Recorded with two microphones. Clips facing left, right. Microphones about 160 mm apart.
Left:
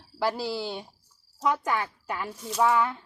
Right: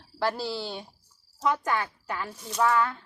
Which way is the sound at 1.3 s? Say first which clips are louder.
Even; 10° left (ahead or behind).